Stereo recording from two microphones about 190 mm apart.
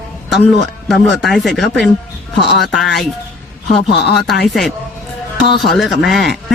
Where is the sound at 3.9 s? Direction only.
60° left (ahead or behind).